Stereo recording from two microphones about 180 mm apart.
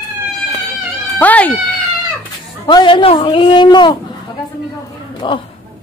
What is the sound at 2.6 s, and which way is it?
A man's voice, 25° left (ahead or behind).